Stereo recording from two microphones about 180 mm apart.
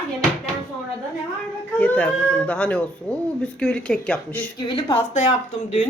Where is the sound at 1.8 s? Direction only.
5° left (ahead or behind).